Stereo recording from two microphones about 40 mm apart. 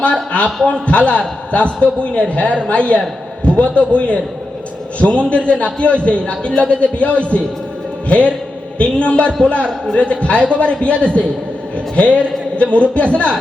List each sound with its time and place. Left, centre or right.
0.0 s a man's voice: left